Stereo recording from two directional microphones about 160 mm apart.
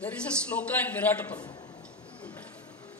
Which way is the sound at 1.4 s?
25° left (ahead or behind).